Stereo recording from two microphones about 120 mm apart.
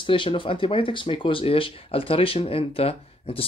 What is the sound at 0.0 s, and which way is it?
Speech, 45° left (ahead or behind).